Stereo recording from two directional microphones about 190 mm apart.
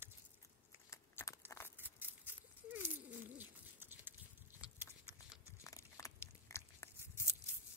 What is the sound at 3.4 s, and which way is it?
Bird, 10° right (ahead or behind).